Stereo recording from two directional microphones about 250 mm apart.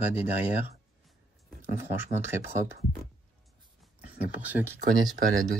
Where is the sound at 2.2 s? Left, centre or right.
Centre.